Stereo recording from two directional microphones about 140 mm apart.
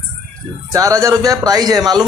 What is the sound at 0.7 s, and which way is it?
Speech, 25° right (ahead or behind).